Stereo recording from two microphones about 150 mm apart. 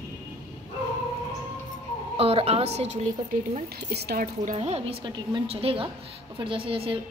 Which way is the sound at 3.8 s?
90° right.